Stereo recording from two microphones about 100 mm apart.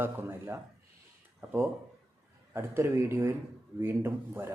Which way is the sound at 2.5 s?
25° right (ahead or behind).